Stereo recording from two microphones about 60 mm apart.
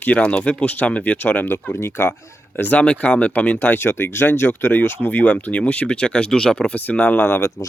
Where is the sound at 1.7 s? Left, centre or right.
Left.